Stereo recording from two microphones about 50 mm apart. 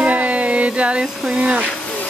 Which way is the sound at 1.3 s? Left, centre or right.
Right.